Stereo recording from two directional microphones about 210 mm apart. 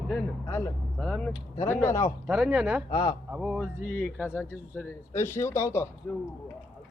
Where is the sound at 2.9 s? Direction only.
20° left (ahead or behind).